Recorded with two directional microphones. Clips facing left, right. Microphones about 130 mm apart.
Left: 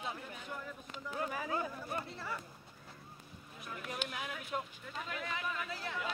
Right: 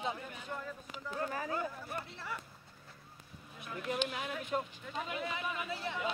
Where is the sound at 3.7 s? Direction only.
Centre (ahead or behind).